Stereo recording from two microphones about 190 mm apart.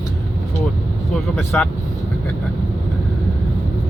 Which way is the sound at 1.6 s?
5° left (ahead or behind).